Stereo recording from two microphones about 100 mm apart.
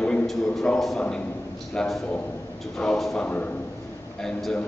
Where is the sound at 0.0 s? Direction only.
5° left (ahead or behind).